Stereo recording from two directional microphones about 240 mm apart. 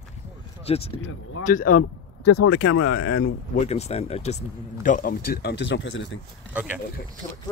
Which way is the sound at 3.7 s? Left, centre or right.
Left.